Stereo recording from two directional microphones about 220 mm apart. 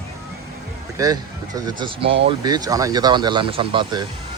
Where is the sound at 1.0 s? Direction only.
15° right (ahead or behind).